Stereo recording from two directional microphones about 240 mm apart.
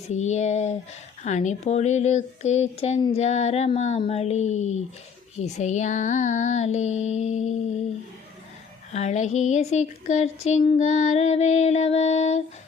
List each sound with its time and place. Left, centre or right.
0.1 s speech: left
8.9 s speech: left